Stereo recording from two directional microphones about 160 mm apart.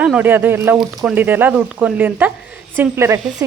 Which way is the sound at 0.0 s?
10° right (ahead or behind).